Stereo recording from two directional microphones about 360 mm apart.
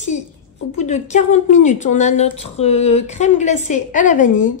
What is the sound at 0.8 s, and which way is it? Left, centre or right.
A woman's voice, centre.